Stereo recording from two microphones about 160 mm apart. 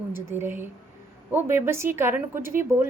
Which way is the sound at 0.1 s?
15° right (ahead or behind).